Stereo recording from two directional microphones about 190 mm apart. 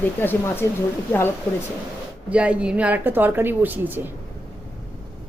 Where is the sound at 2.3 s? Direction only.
5° right (ahead or behind).